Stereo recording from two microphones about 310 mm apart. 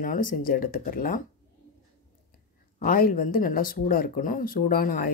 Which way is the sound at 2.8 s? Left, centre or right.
Left.